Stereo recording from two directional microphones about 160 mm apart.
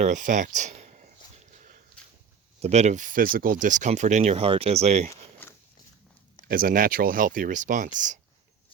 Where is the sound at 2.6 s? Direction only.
45° right (ahead or behind).